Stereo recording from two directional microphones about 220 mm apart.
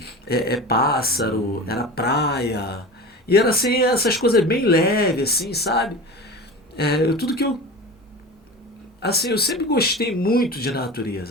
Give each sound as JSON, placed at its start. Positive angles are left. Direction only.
{"t": 0.4, "sound": "speech", "side_deg": 45}
{"t": 9.0, "sound": "speech", "side_deg": 45}